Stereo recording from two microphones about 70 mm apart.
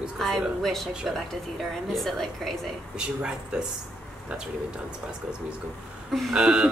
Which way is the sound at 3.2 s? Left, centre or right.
Centre.